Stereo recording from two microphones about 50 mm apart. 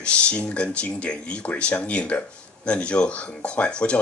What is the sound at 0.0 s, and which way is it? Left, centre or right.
Speech, left.